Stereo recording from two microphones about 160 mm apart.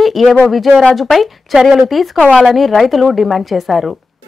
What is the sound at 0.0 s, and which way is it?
Speech, centre (ahead or behind).